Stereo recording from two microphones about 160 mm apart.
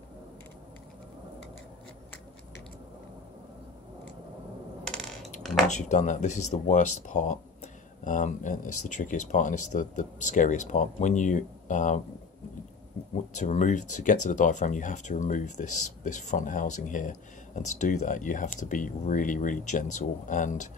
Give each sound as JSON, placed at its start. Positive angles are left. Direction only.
{"t": 4.8, "sound": "coin", "side_deg": 5}
{"t": 5.7, "sound": "speech", "side_deg": 45}
{"t": 13.3, "sound": "speech", "side_deg": 50}